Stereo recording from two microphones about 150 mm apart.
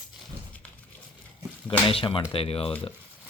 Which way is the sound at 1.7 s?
35° left (ahead or behind).